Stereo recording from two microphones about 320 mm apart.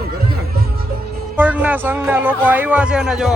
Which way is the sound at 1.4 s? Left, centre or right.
Centre.